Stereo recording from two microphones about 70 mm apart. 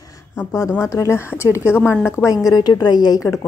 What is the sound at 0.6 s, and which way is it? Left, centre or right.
A woman's voice, left.